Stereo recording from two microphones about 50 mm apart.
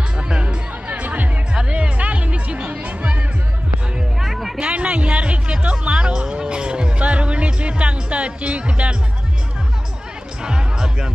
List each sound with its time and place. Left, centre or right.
0.4 s music: right
1.5 s music: right
4.2 s music: centre
4.6 s music: right
10.4 s music: centre